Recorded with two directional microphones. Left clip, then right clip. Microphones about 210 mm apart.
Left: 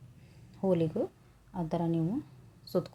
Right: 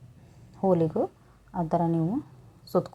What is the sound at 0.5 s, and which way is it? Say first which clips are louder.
A woman's voice: right 6 dB; 5° right (ahead or behind).